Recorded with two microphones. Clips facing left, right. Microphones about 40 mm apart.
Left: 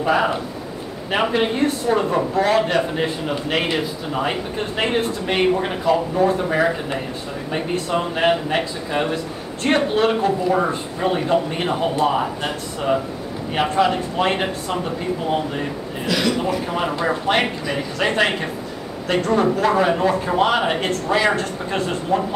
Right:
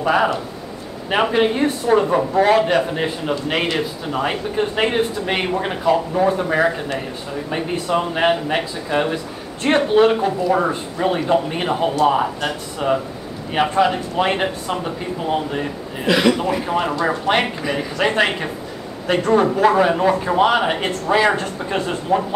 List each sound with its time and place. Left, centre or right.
0.0 s a man's voice: centre
13.6 s a man's voice: centre
16.1 s a man's voice: right
16.6 s a man's voice: centre